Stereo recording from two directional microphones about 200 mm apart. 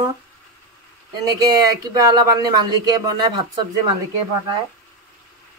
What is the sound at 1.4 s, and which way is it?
Speech, 20° right (ahead or behind).